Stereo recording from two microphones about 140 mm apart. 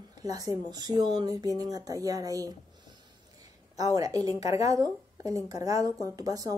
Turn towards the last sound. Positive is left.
turn(degrees=-25)  # may be behind; listen again after turning